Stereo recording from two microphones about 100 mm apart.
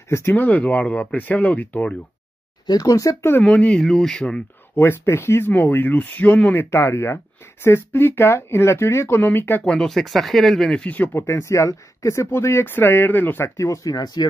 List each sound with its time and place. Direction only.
0.1 s speech: 25° left (ahead or behind)
2.6 s speech: 40° left (ahead or behind); by 3.4 s 25° left (ahead or behind)
3.4 s speech: 10° left (ahead or behind)
4.7 s speech: 25° left (ahead or behind)
9.8 s speech: 5° left (ahead or behind)
11.1 s speech: 30° left (ahead or behind)
13.6 s speech: 35° left (ahead or behind)